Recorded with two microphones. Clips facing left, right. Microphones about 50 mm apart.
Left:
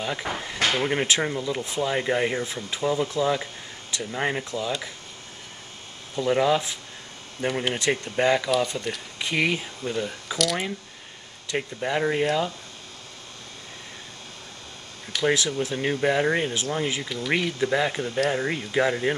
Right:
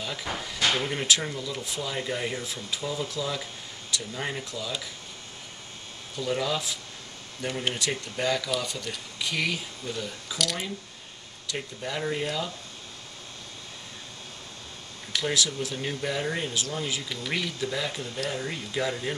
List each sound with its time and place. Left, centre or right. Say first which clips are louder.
0.0 s speech: left 4 dB; left
6.1 s speech: left 7 dB; left
10.3 s speech: left 5 dB; centre
11.4 s speech: left 6 dB; left
15.2 s speech: left 6 dB; left